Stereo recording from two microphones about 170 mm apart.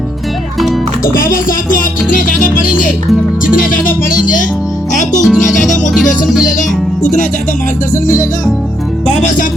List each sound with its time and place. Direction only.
1.0 s speech: 55° left (ahead or behind)
3.4 s music: 55° left (ahead or behind)
5.2 s music: centre (ahead or behind)
6.6 s speech: 50° left (ahead or behind)